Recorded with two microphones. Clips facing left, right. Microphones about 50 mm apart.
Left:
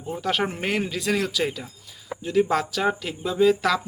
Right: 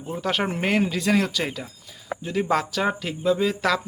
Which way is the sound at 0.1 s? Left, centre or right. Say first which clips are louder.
Even; centre.